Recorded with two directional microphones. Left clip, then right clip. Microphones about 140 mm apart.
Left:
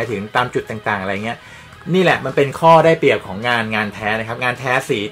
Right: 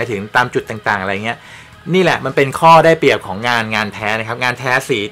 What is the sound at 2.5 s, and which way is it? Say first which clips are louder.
Speech: right 3 dB; 45° right (ahead or behind).